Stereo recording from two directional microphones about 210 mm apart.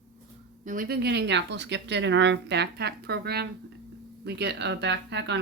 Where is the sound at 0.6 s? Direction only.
40° right (ahead or behind).